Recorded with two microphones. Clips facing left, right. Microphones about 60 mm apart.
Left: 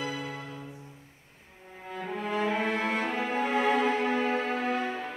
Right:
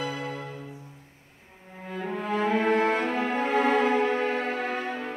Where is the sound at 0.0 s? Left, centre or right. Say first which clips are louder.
Right 3 dB; right.